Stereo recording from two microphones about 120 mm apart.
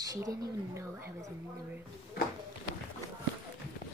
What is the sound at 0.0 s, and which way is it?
Speech, 30° right (ahead or behind).